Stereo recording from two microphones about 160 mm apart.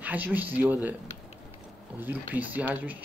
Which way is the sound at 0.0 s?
10° right (ahead or behind).